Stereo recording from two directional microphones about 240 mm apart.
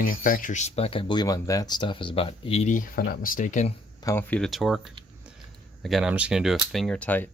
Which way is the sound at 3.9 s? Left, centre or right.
Centre.